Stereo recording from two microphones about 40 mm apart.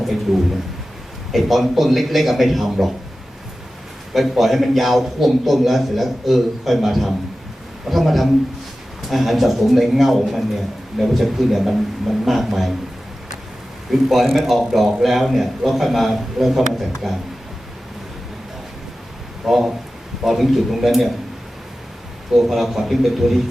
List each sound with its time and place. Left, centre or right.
1.3 s a man's voice: centre
4.1 s a man's voice: centre
13.9 s a man's voice: centre
19.5 s a man's voice: centre
22.4 s a man's voice: centre